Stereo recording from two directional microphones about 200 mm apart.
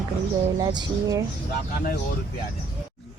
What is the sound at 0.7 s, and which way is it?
Speech, 20° right (ahead or behind).